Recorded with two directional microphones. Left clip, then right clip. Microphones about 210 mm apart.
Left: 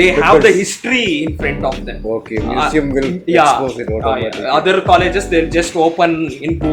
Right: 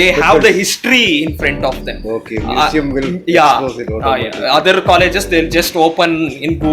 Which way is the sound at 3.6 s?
Centre (ahead or behind).